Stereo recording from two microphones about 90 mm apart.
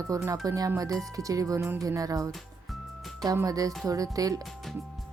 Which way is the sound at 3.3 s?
40° right (ahead or behind).